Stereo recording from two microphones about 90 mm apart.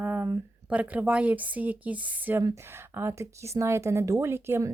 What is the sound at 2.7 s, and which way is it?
Speech, 30° right (ahead or behind).